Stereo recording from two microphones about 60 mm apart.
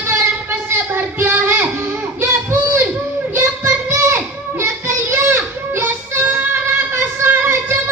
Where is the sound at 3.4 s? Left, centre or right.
Right.